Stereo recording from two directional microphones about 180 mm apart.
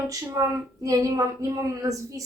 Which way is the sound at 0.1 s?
15° right (ahead or behind).